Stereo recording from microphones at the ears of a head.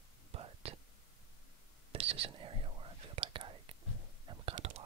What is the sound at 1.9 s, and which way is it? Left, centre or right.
Whispering, right.